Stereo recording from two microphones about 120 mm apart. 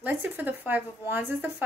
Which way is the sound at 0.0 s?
15° right (ahead or behind).